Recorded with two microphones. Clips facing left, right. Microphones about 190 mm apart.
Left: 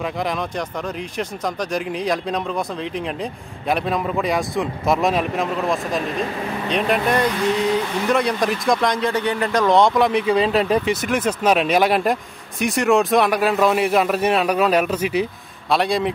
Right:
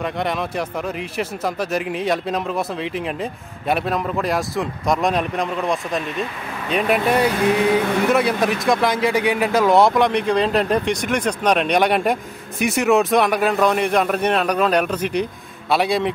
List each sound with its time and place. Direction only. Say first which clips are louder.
0.0 s speech: right 1 dB; centre (ahead or behind)
7.4 s vehicle: right 2 dB; 60° right (ahead or behind)
8.1 s speech: left 2 dB; 5° right (ahead or behind)